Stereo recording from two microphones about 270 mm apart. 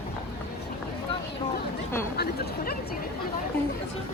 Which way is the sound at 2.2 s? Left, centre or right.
Left.